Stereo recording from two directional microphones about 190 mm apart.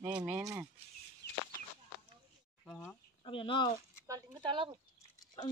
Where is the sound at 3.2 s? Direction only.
25° left (ahead or behind).